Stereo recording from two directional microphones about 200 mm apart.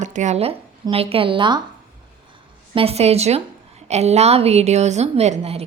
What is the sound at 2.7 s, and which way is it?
A woman's voice, 30° right (ahead or behind).